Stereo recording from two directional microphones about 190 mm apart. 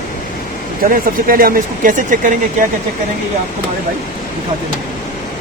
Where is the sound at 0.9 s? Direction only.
50° right (ahead or behind).